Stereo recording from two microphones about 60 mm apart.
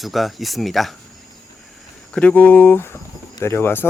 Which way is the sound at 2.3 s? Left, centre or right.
Left.